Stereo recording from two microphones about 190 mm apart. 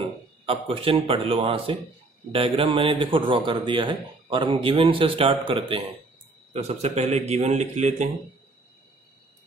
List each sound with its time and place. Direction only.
0.0 s a man's voice: 30° right (ahead or behind)
6.5 s a man's voice: 35° right (ahead or behind)